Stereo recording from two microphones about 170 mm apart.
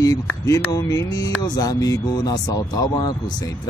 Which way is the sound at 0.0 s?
20° left (ahead or behind).